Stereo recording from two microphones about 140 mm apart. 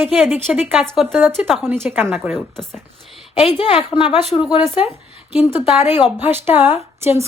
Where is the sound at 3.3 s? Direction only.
40° left (ahead or behind).